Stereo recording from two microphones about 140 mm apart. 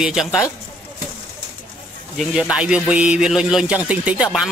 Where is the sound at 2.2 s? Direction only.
5° right (ahead or behind).